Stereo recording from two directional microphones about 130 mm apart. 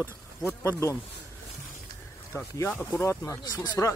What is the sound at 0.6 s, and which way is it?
Speech, 20° left (ahead or behind).